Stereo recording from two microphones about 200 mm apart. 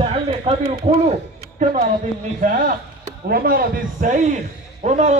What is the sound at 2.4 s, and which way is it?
A man's voice, 40° right (ahead or behind).